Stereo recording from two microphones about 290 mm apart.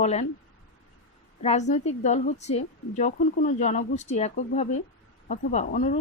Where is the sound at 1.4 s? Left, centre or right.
Left.